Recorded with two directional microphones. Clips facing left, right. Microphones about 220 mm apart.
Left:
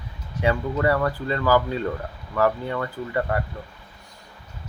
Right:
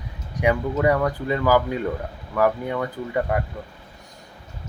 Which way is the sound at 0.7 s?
10° right (ahead or behind).